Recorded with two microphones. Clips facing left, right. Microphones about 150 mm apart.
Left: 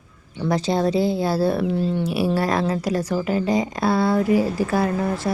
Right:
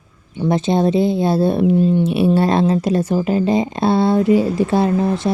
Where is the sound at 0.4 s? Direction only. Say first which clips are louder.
Right 4 dB; 20° right (ahead or behind).